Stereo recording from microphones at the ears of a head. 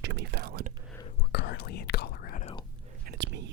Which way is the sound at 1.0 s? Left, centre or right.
Left.